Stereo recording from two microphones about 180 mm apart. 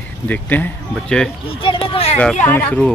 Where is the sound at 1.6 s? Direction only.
30° left (ahead or behind).